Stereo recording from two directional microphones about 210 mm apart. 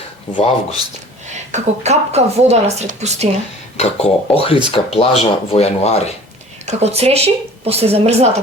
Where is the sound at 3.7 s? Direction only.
30° left (ahead or behind).